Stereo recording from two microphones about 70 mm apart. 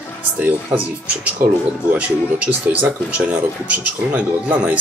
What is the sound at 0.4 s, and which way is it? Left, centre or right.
Speech, right.